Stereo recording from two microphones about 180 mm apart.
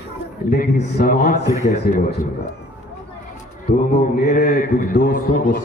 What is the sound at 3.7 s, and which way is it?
A man's voice, 45° left (ahead or behind).